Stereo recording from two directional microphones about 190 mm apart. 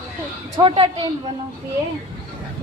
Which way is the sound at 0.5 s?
25° right (ahead or behind).